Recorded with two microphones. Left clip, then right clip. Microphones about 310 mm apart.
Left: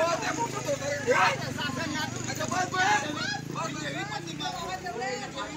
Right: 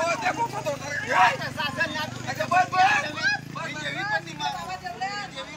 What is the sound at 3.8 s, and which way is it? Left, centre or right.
Vehicle, centre.